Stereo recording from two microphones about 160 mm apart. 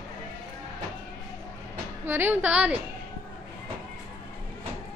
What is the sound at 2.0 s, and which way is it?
Music, 15° right (ahead or behind).